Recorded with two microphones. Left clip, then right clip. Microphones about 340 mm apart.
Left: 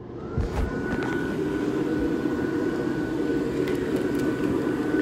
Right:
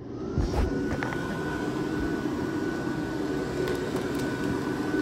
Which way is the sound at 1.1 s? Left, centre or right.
Centre.